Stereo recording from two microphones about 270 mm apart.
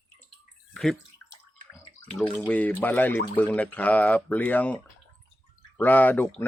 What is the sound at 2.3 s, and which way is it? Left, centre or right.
Speech, centre.